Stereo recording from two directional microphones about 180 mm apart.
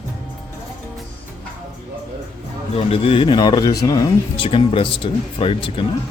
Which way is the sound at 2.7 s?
35° left (ahead or behind).